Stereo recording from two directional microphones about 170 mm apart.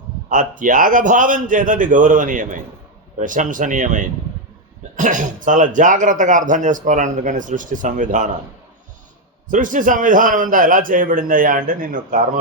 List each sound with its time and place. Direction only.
0.3 s speech: 50° right (ahead or behind)
9.5 s speech: 50° right (ahead or behind)